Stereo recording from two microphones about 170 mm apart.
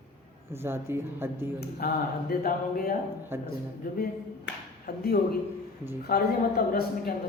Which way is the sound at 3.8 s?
55° left (ahead or behind).